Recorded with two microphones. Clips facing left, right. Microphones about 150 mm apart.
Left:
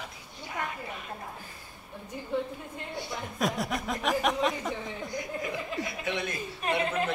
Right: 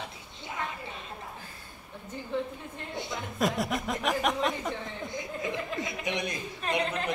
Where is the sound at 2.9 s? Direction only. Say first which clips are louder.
Right 1 dB; 20° right (ahead or behind).